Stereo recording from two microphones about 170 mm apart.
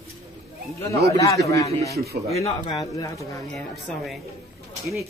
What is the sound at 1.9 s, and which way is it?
Speech, 70° right (ahead or behind).